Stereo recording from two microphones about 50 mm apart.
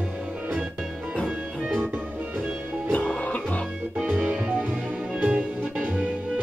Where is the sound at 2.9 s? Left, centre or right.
Left.